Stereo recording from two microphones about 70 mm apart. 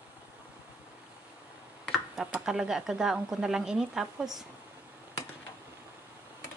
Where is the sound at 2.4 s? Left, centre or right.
Centre.